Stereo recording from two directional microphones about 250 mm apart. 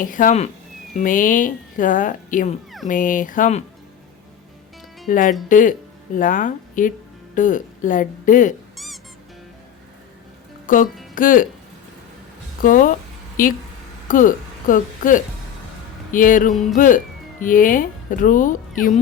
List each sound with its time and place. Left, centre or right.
0.0 s speech: left
5.0 s speech: left
8.7 s music: centre
10.7 s speech: left
12.6 s speech: left